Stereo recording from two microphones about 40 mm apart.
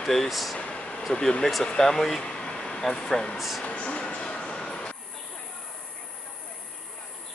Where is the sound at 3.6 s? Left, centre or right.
Left.